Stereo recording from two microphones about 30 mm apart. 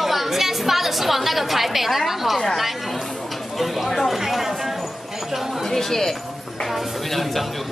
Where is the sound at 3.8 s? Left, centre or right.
Centre.